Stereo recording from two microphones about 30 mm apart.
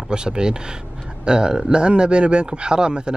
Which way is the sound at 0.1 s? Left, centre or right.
Right.